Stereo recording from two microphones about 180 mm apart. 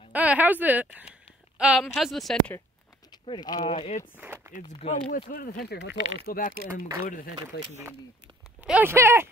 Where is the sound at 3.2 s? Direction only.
25° left (ahead or behind).